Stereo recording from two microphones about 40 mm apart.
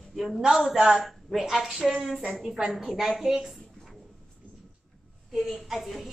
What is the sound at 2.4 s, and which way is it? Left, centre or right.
Speech, centre.